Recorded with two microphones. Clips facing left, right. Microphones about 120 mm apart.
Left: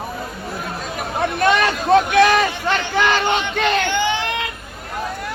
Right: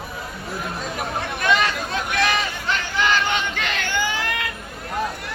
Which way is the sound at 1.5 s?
55° left (ahead or behind).